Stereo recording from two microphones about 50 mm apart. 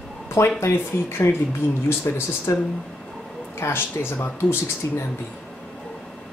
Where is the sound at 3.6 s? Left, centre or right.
Left.